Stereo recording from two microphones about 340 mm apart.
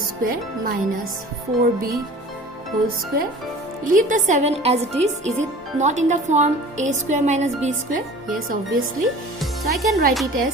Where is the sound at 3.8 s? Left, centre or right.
Right.